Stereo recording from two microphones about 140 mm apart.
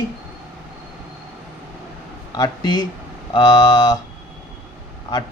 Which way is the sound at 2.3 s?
30° left (ahead or behind).